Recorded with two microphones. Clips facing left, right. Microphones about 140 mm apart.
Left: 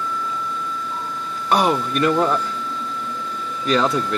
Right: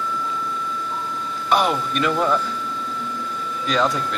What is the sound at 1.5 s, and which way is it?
Speech, 40° left (ahead or behind).